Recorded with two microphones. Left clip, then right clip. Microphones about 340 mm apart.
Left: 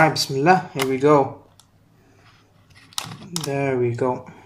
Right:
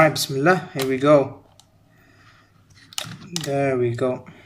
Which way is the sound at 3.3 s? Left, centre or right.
Right.